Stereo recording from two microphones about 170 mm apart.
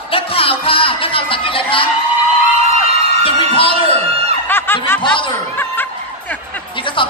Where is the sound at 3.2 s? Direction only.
30° left (ahead or behind).